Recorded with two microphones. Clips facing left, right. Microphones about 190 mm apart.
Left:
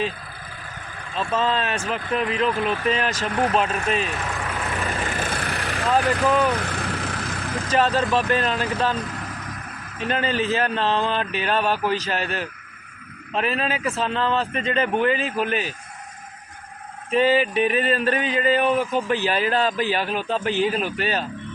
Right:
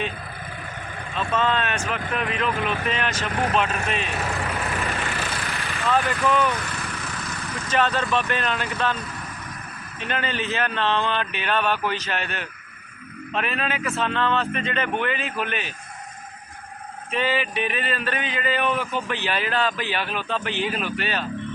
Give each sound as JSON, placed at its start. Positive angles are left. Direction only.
{"t": 1.3, "sound": "speech", "side_deg": 30}
{"t": 4.4, "sound": "vehicle", "side_deg": 0}
{"t": 4.9, "sound": "vehicle", "side_deg": 45}
{"t": 6.1, "sound": "speech", "side_deg": 35}
{"t": 6.6, "sound": "vehicle", "side_deg": 60}
{"t": 7.7, "sound": "speech", "side_deg": 35}
{"t": 10.0, "sound": "speech", "side_deg": 35}
{"t": 17.1, "sound": "speech", "side_deg": 40}